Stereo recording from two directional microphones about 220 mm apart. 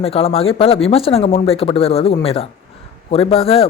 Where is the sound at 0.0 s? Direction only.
25° left (ahead or behind).